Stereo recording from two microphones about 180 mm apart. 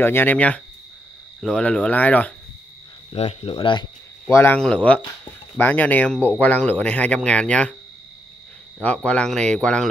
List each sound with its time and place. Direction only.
0.0 s speech: 10° left (ahead or behind)
3.1 s speech: 35° left (ahead or behind)
4.3 s speech: 10° left (ahead or behind)
8.7 s speech: 5° left (ahead or behind)